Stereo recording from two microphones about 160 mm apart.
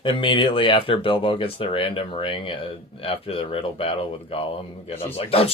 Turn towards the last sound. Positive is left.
turn(degrees=40)  # may be behind; listen again after turning